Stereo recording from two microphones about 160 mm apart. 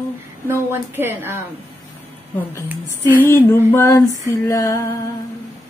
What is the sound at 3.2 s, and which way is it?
Female singing, 15° left (ahead or behind).